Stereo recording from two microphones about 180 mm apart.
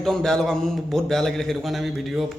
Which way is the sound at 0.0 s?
5° left (ahead or behind).